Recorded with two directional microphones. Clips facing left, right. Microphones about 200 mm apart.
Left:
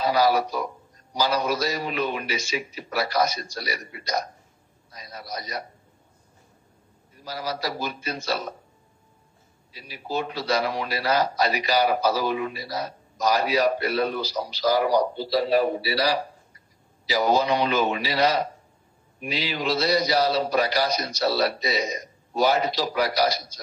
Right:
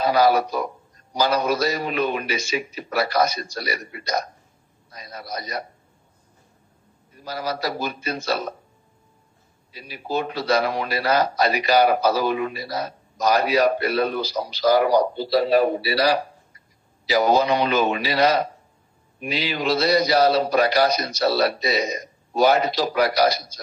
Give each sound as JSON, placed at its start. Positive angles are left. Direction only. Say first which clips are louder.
{"t": 0.0, "sound": "speech", "louder": "right 3 dB", "side_deg": -55}
{"t": 7.2, "sound": "speech", "louder": "right 3 dB", "side_deg": -55}
{"t": 9.7, "sound": "speech", "louder": "right 3 dB", "side_deg": -55}